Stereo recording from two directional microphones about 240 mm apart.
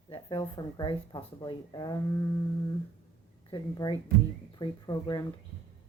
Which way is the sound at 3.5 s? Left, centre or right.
Centre.